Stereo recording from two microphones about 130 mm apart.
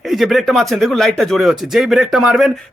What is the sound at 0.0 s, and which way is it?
A man's voice, centre (ahead or behind).